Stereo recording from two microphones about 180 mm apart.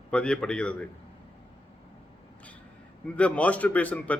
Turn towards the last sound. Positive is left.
turn(degrees=10)  # may be behind; listen again after turning